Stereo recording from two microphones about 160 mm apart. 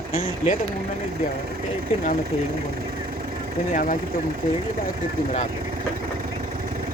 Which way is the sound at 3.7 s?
55° left (ahead or behind).